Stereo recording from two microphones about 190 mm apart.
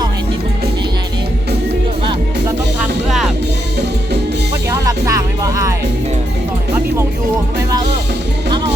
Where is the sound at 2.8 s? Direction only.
Centre (ahead or behind).